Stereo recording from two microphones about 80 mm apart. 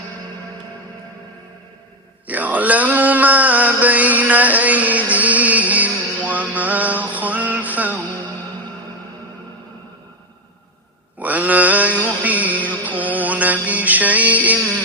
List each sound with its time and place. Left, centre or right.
2.2 s a sound: centre
7.1 s music: centre
11.2 s mantra: centre
12.0 s music: centre